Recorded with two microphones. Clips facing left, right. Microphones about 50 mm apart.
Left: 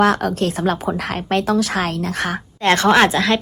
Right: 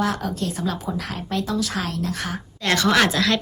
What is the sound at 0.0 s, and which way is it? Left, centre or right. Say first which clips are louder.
Speech: left 8 dB; left.